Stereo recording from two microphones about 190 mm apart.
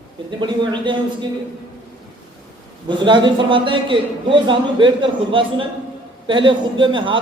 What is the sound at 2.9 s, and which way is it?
Speech, 25° right (ahead or behind).